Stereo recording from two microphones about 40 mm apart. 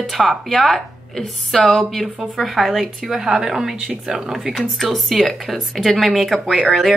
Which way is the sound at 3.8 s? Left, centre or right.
Right.